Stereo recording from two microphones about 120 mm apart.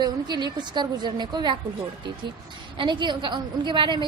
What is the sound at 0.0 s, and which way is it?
A woman's voice, 40° right (ahead or behind).